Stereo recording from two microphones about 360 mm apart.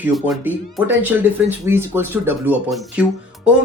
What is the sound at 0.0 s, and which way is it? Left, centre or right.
Speech, centre.